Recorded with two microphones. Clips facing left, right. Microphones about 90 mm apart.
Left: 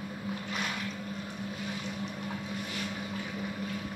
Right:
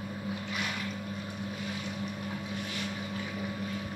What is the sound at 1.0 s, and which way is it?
Boat, 10° right (ahead or behind).